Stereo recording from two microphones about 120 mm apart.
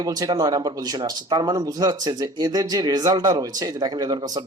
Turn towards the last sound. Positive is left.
turn(degrees=-35)  # may be behind; listen again after turning